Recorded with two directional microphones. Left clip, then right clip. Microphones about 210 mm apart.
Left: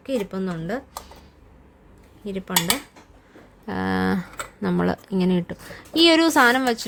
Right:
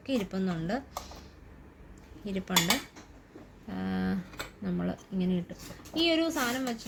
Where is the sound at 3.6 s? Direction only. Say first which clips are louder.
Left 12 dB; 60° left (ahead or behind).